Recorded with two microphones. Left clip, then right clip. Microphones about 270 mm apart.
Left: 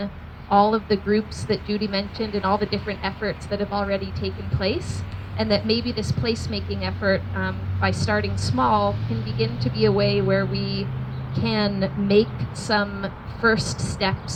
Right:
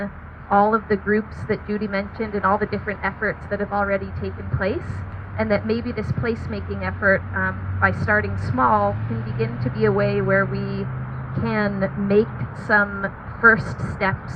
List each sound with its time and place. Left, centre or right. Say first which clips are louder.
0.5 s a woman's voice: right 1 dB; left
13.6 s a woman's voice: left 1 dB; centre